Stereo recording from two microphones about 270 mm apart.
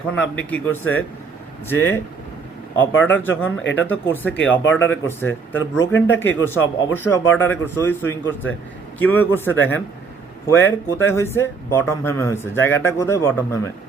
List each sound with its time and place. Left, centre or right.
0.3 s speech: centre
2.9 s speech: left
3.2 s speech: centre
3.6 s speech: left
3.8 s speech: centre